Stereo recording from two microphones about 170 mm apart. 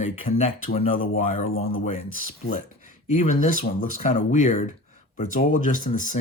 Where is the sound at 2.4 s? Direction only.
50° left (ahead or behind).